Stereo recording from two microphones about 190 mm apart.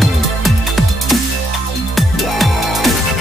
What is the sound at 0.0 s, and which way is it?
Music, centre (ahead or behind).